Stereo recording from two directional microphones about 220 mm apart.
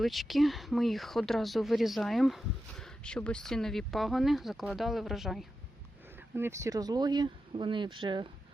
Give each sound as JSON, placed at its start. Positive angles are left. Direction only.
{"t": 0.0, "sound": "speech", "side_deg": 0}
{"t": 6.3, "sound": "speech", "side_deg": -10}